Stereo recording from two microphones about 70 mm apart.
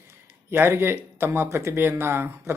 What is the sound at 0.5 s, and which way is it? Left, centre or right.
Speech, right.